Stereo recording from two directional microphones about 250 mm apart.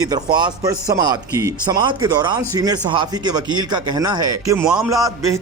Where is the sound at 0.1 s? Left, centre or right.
Centre.